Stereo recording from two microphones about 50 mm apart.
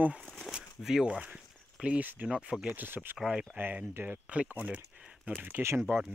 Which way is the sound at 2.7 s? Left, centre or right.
Right.